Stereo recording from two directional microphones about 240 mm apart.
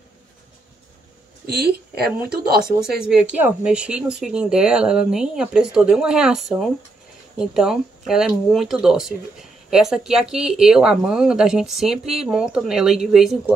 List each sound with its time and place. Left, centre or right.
1.6 s speech: right
3.0 s speech: centre